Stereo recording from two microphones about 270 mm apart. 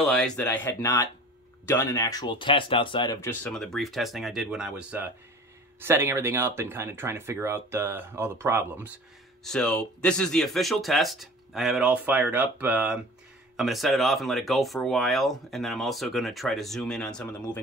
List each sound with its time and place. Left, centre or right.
0.0 s speech: centre
17.1 s speech: centre